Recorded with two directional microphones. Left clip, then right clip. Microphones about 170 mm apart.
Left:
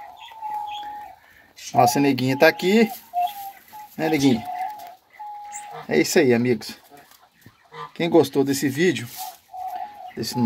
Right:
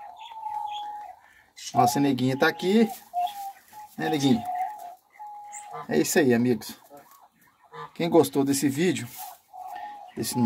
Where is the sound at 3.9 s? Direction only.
25° left (ahead or behind).